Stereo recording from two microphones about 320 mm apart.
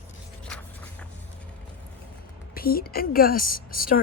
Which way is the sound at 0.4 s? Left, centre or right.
Centre.